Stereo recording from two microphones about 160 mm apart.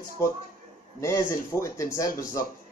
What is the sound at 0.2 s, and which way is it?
Speech, 15° left (ahead or behind).